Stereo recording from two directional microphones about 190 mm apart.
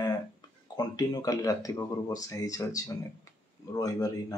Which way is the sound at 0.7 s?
20° left (ahead or behind).